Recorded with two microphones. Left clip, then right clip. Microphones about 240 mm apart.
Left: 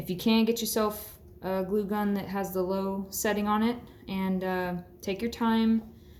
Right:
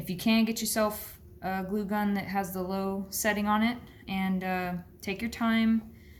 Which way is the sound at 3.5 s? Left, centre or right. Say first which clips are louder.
Even; right.